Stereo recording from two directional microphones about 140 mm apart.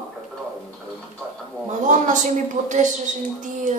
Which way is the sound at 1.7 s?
60° right (ahead or behind).